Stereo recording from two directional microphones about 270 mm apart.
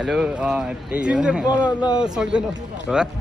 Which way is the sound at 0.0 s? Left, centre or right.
Centre.